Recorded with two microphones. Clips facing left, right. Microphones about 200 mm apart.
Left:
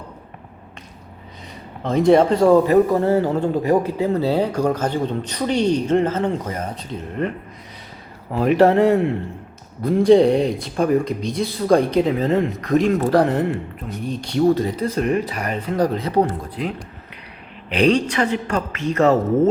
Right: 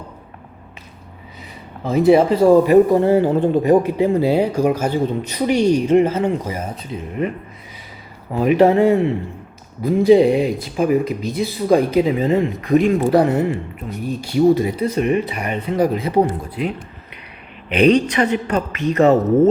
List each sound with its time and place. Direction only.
1.8 s speech: 5° right (ahead or behind)
18.0 s speech: 15° right (ahead or behind)